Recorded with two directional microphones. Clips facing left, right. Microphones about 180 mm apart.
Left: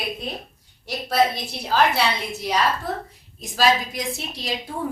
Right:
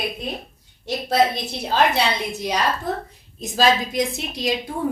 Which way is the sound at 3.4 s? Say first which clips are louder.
Right 1 dB; 20° right (ahead or behind).